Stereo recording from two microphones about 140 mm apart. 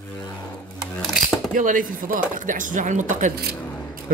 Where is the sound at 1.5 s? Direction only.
70° right (ahead or behind).